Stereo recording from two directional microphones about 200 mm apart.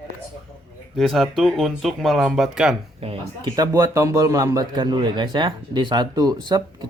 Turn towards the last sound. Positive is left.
turn(degrees=-20)  # may be behind; listen again after turning